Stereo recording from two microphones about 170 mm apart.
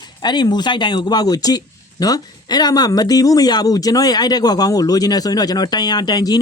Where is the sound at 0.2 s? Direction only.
25° left (ahead or behind).